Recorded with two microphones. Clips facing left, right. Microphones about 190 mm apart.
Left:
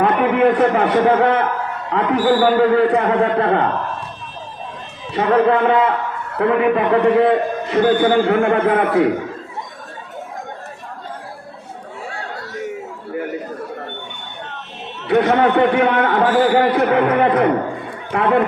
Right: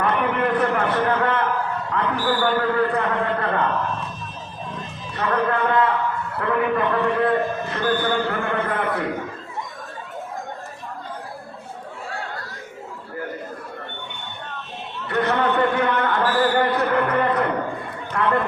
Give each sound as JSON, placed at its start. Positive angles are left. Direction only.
{"t": 0.0, "sound": "a man's voice", "side_deg": 80}
{"t": 5.1, "sound": "a man's voice", "side_deg": 85}
{"t": 12.5, "sound": "a sound", "side_deg": 75}
{"t": 15.0, "sound": "a man's voice", "side_deg": 90}